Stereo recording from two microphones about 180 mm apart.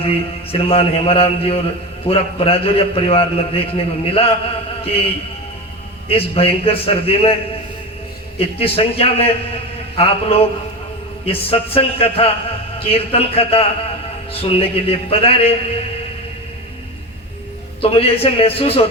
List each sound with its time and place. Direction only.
0.0 s a man's voice: 30° left (ahead or behind)
8.4 s a man's voice: 30° left (ahead or behind)
17.7 s a man's voice: 30° left (ahead or behind)